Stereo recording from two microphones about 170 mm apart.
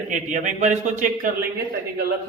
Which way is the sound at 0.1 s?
45° right (ahead or behind).